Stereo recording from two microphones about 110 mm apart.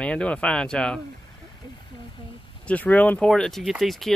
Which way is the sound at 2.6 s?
15° left (ahead or behind).